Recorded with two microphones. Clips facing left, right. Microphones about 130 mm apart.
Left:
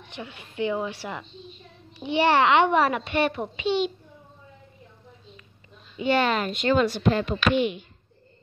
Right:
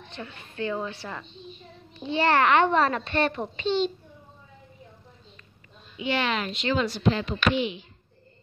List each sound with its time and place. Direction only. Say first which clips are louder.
0.1 s a child's voice: left 2 dB; 15° left (ahead or behind)
5.9 s speech: left 4 dB; 45° left (ahead or behind)